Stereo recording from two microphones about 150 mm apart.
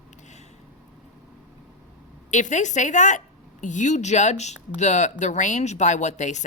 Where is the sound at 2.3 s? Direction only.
55° left (ahead or behind).